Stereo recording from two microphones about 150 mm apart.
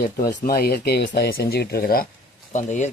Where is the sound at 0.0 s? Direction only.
80° left.